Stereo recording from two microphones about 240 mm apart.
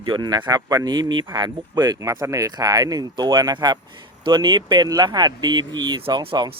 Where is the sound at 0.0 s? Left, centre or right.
Centre.